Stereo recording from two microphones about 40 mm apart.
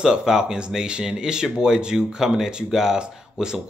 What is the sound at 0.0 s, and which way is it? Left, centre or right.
Speech, centre.